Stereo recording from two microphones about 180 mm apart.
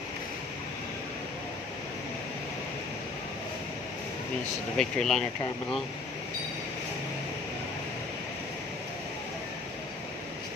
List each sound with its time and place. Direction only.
4.7 s speech: 5° left (ahead or behind)